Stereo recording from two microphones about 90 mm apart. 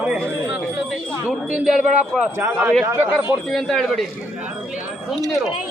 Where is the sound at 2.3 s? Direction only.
30° right (ahead or behind).